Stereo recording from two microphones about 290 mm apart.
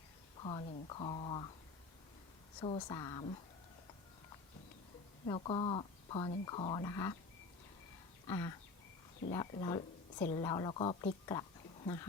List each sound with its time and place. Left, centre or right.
0.3 s speech: centre
2.6 s speech: centre
5.2 s speech: centre
8.3 s a woman's voice: centre